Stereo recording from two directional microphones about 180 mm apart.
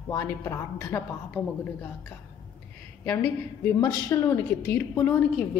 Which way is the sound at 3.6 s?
15° left (ahead or behind).